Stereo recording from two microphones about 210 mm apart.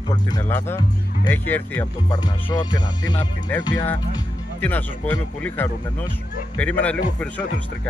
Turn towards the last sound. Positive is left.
turn(degrees=5)  # may be behind; listen again after turning